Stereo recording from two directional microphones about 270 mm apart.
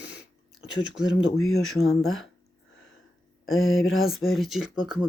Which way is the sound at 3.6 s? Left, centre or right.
Centre.